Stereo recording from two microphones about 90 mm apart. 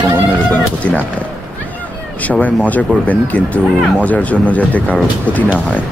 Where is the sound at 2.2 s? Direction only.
15° left (ahead or behind).